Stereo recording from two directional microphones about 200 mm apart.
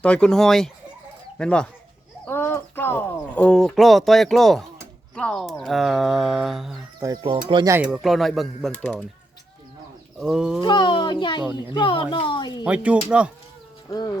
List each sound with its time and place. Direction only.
0.0 s speech: 5° left (ahead or behind)
7.0 s speech: 20° right (ahead or behind)
7.8 s speech: 5° right (ahead or behind)
10.2 s speech: 5° right (ahead or behind)
10.6 s a child's voice: 20° left (ahead or behind)
12.6 s speech: 5° right (ahead or behind)
13.9 s speech: 15° left (ahead or behind)